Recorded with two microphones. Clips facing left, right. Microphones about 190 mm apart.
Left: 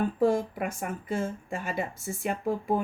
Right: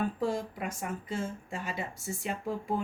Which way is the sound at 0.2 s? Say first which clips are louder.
Left 7 dB; 55° left (ahead or behind).